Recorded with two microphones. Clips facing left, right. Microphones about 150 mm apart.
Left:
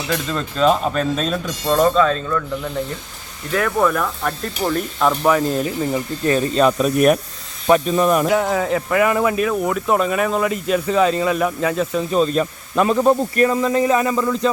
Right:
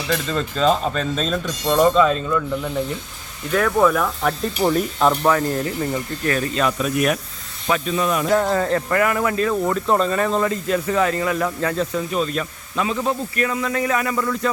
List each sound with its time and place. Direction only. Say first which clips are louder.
0.1 s speech: right 1 dB; centre (ahead or behind)
1.9 s speech: even; 5° right (ahead or behind)
4.6 s speech: right 2 dB; 15° right (ahead or behind)
5.3 s speech: left 2 dB; 20° left (ahead or behind)
6.3 s speech: left 6 dB; 30° left (ahead or behind); by 8.3 s 45° left (ahead or behind)
8.3 s speech: even; 10° left (ahead or behind)
9.5 s speech: left 1 dB; 5° left (ahead or behind)
12.1 s speech: left 8 dB; 35° left (ahead or behind)
12.7 s speech: left 7 dB; 50° left (ahead or behind); by 14.5 s 20° left (ahead or behind)